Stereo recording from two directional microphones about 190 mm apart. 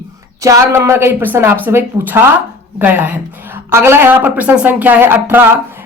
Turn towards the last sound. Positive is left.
turn(degrees=-10)  # may be behind; listen again after turning